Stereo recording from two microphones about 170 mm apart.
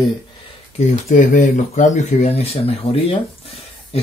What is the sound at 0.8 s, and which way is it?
Speech, 45° left (ahead or behind).